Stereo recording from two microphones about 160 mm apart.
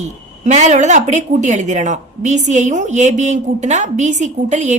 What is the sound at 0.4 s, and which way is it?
A woman's voice, 45° right (ahead or behind).